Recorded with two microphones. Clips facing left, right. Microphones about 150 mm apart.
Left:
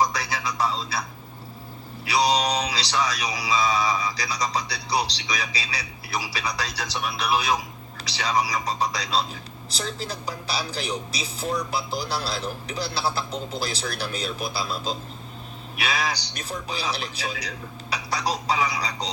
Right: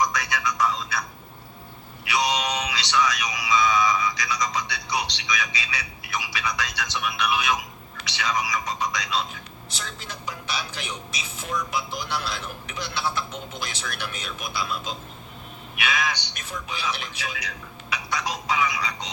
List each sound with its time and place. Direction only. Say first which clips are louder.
0.0 s music: even; 30° left (ahead or behind)
2.0 s music: left 3 dB; 35° left (ahead or behind)